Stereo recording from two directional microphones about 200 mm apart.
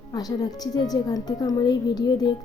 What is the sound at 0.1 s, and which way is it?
A woman's voice, 20° left (ahead or behind).